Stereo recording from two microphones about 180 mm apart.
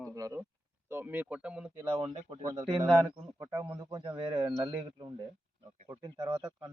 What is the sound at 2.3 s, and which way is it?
Speech, 20° right (ahead or behind).